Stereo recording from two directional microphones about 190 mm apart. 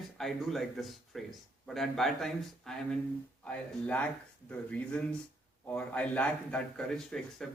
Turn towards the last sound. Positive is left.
turn(degrees=5)  # may be behind; listen again after turning